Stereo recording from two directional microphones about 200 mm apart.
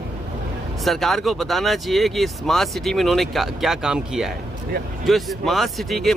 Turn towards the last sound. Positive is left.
turn(degrees=0)  # may be behind; listen again after turning